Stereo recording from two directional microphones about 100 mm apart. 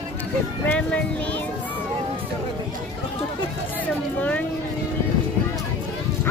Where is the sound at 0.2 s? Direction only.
15° left (ahead or behind).